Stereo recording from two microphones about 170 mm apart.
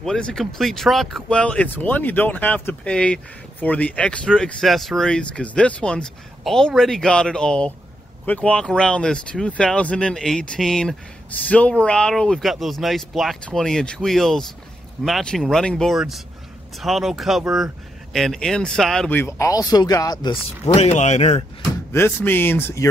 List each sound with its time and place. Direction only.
0.0 s speech: 5° left (ahead or behind); by 20.3 s 25° left (ahead or behind)
20.6 s speech: 40° left (ahead or behind)
21.9 s speech: 15° left (ahead or behind)